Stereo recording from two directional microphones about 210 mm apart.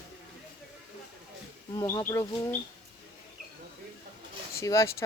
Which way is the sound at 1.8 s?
20° left (ahead or behind).